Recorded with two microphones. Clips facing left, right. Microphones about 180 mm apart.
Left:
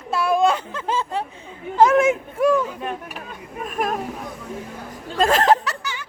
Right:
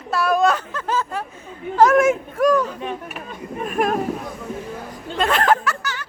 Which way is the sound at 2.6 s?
5° left (ahead or behind).